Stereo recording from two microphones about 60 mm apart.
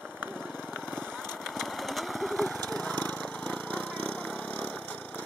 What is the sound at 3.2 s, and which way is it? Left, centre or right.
Splinter, left.